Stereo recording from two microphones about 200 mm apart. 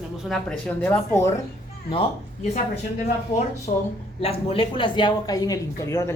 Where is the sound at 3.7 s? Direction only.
35° left (ahead or behind); by 6.1 s 15° left (ahead or behind).